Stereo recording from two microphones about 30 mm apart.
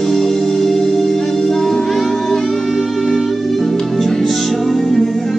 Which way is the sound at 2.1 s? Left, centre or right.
Centre.